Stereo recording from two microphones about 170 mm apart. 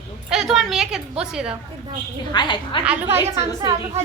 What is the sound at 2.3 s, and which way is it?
Speech, 25° left (ahead or behind).